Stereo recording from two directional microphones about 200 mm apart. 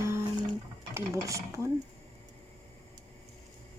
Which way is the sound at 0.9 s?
15° right (ahead or behind).